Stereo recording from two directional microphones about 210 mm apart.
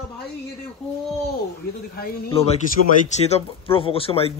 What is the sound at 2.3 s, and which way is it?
Speech, 30° left (ahead or behind).